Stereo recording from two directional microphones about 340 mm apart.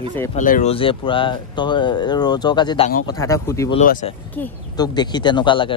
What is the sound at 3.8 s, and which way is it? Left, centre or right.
Speech, left.